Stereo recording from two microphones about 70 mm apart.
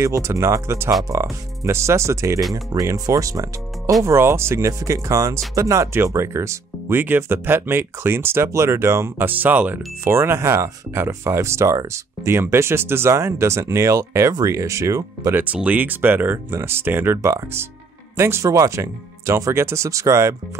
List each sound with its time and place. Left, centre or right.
0.0 s speech: right
4.0 s speech: right
9.4 s speech: right
10.0 s speech: right
15.3 s speech: right
18.4 s speech: right